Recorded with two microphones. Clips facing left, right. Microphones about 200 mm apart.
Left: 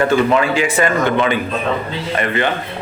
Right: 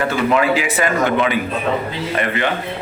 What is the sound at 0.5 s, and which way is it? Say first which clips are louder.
Speech: left 2 dB; 5° right (ahead or behind).